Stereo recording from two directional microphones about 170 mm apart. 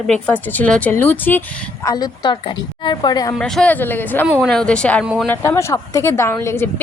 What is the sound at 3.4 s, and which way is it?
Speech, 5° left (ahead or behind).